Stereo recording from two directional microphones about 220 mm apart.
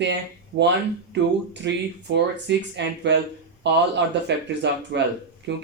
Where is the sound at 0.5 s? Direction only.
60° right (ahead or behind).